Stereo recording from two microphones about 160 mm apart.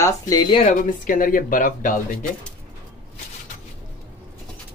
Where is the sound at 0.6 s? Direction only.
60° left (ahead or behind).